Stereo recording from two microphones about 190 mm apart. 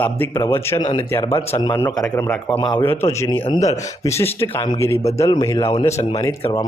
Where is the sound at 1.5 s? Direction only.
25° left (ahead or behind).